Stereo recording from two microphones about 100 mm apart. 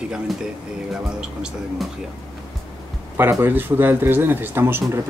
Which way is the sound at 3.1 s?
20° right (ahead or behind).